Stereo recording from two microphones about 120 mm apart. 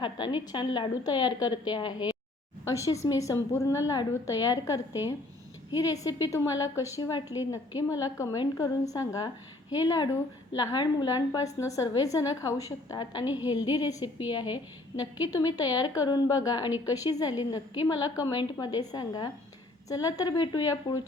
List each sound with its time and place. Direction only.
0.0 s a woman's voice: 40° left (ahead or behind)
2.8 s a woman's voice: 25° left (ahead or behind)